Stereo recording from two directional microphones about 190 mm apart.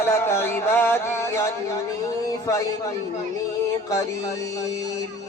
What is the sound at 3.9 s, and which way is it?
Music, 15° left (ahead or behind).